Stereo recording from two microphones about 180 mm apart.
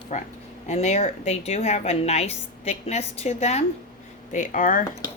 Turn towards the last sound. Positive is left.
turn(degrees=50)  # may be behind; listen again after turning